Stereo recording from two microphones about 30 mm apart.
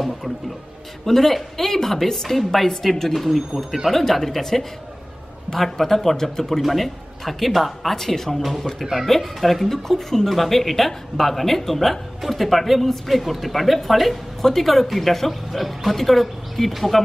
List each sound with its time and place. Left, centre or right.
1.0 s speech: centre
3.5 s speech: centre
3.9 s speech: centre